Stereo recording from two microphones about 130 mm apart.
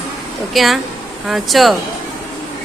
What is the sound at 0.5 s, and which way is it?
A woman's voice, centre (ahead or behind).